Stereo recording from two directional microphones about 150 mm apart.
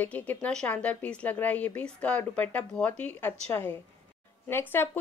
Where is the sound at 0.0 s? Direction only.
10° left (ahead or behind).